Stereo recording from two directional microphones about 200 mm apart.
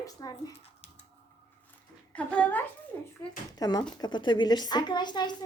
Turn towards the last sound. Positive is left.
turn(degrees=20)  # may be behind; listen again after turning